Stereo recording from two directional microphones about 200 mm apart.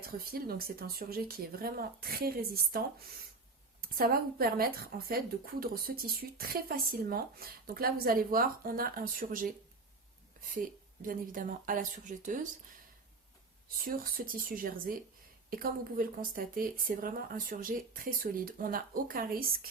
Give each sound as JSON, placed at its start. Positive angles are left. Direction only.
{"t": 0.0, "sound": "speech", "side_deg": -50}
{"t": 11.0, "sound": "speech", "side_deg": -45}
{"t": 13.8, "sound": "speech", "side_deg": -45}